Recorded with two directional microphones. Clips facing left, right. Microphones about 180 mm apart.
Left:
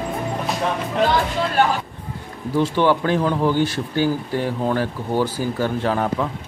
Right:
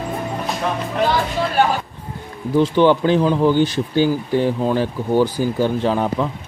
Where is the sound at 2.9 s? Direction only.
15° right (ahead or behind).